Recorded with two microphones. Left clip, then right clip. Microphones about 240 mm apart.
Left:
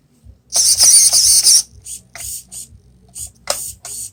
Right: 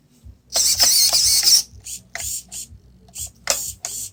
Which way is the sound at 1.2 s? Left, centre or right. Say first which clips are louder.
Left 4 dB; centre.